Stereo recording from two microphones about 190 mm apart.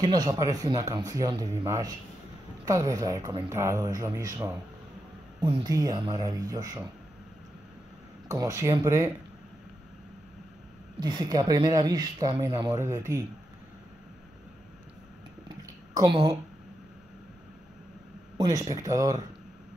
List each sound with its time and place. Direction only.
0.0 s speech: 20° right (ahead or behind)
8.3 s speech: 15° right (ahead or behind)
11.0 s speech: 20° right (ahead or behind)
15.4 s a sound: 25° right (ahead or behind)
18.4 s speech: 20° right (ahead or behind)